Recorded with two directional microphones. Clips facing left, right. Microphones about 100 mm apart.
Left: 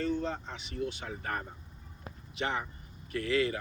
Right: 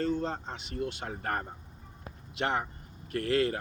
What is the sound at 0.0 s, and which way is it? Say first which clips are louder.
Speech: right 2 dB; 45° right (ahead or behind).